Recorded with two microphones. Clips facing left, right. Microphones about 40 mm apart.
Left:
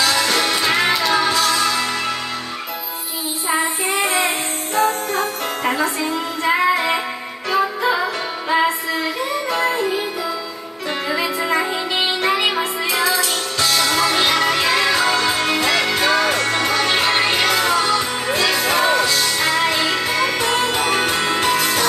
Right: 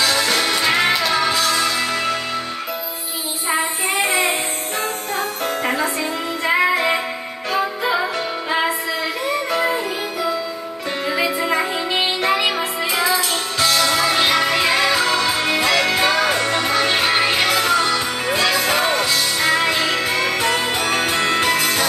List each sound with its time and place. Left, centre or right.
0.0 s music: centre
3.4 s child singing: centre
4.7 s music: centre
8.5 s music: centre
9.6 s music: centre
11.1 s music: centre